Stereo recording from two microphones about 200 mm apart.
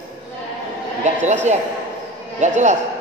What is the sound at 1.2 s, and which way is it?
A man's voice, 35° right (ahead or behind).